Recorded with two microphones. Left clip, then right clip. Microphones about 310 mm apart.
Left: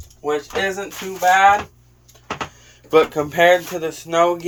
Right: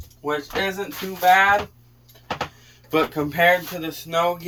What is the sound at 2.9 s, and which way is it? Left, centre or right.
Speech, left.